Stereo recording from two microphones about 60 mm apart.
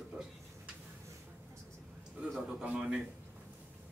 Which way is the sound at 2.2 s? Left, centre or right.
Centre.